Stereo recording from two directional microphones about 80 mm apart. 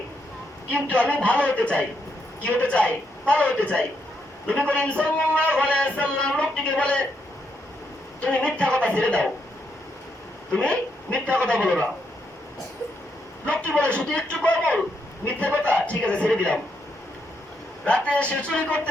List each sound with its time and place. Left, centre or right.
0.7 s a man's voice: centre
8.2 s a man's voice: centre
10.5 s a man's voice: centre
13.4 s a man's voice: centre
17.8 s a man's voice: centre